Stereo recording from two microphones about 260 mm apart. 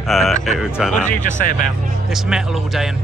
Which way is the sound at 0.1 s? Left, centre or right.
Centre.